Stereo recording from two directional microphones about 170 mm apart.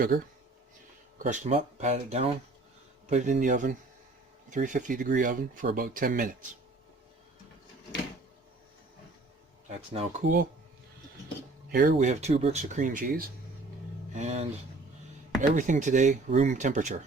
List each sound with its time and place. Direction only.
1.2 s speech: 45° right (ahead or behind)
9.9 s speech: 40° right (ahead or behind)
11.7 s speech: 55° right (ahead or behind)
14.2 s speech: 40° right (ahead or behind)